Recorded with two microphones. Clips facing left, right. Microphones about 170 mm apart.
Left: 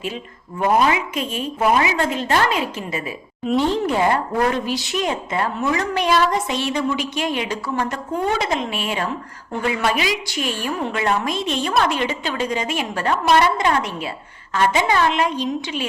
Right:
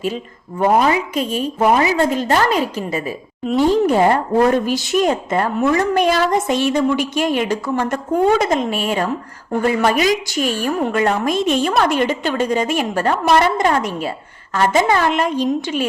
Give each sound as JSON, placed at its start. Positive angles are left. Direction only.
{"t": 0.6, "sound": "a woman's voice", "side_deg": -35}
{"t": 3.4, "sound": "speech", "side_deg": -5}
{"t": 3.8, "sound": "a woman's voice", "side_deg": -40}